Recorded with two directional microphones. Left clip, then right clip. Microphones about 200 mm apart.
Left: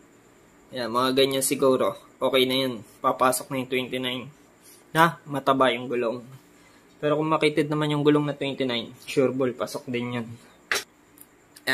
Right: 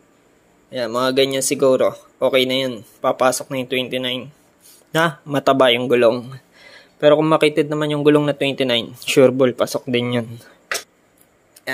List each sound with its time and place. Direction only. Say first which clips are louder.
0.7 s speech: right 5 dB; 35° right (ahead or behind); by 10.2 s 55° right (ahead or behind)
11.7 s speech: even; 10° right (ahead or behind)